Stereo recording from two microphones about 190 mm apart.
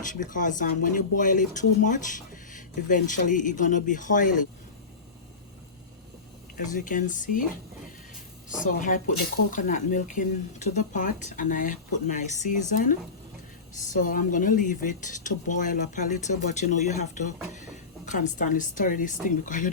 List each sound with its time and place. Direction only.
0.0 s speech: 45° left (ahead or behind)
6.7 s speech: 45° left (ahead or behind)
8.6 s speech: 45° left (ahead or behind)